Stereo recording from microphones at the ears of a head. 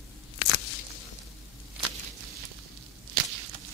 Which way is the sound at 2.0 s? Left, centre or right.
Right.